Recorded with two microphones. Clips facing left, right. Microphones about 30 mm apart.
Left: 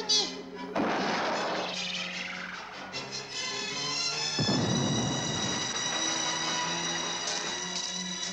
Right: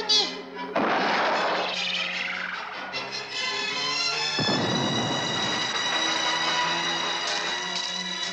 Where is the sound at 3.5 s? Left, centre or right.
Right.